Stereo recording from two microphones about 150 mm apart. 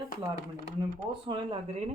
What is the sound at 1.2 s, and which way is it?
Speech, 35° right (ahead or behind).